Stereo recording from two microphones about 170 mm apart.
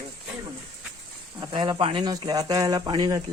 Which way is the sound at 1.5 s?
30° right (ahead or behind).